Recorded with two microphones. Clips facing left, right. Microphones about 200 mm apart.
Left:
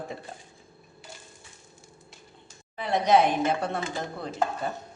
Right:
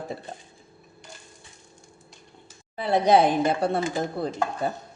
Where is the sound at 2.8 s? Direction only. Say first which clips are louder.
Right 3 dB; 35° right (ahead or behind).